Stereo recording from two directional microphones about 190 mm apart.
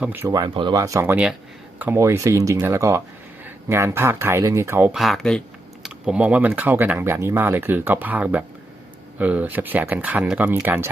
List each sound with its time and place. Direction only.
0.0 s speech: 10° right (ahead or behind)
4.9 s speech: centre (ahead or behind)